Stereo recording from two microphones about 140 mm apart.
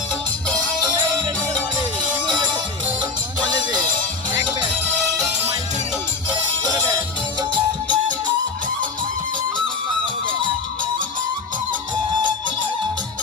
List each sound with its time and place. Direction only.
0.5 s music: 30° right (ahead or behind)
3.5 s music: 30° right (ahead or behind)
6.7 s music: 30° right (ahead or behind)